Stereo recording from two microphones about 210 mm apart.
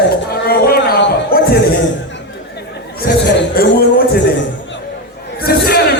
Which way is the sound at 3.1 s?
45° left (ahead or behind).